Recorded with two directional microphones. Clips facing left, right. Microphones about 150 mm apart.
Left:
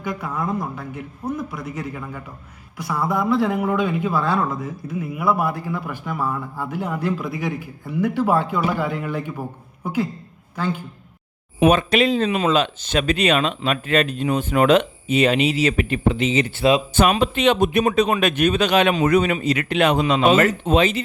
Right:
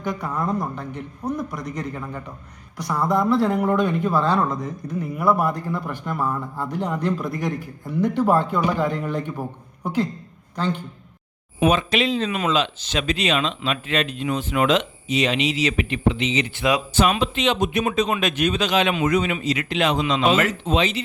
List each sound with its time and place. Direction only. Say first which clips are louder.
0.0 s a man's voice: even; 5° left (ahead or behind)
11.7 s speech: left 4 dB; 55° left (ahead or behind)
14.7 s speech: left 4 dB; 55° left (ahead or behind)